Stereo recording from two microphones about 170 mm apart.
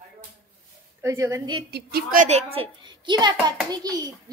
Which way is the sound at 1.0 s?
15° right (ahead or behind).